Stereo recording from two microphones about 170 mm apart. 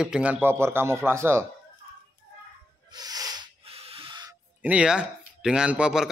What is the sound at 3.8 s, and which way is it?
Owl, 30° right (ahead or behind).